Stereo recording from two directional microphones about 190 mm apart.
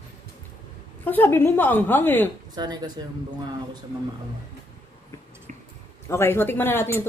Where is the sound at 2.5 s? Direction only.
20° right (ahead or behind).